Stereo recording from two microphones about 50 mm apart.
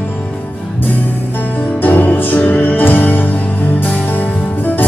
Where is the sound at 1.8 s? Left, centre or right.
Left.